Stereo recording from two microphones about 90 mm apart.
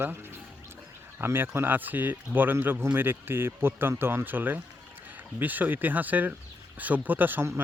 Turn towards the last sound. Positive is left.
turn(degrees=-25)  # may be behind; listen again after turning